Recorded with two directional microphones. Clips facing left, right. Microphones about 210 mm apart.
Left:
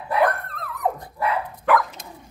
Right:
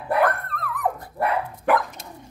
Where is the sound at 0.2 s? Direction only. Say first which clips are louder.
Left 4 dB; 20° left (ahead or behind).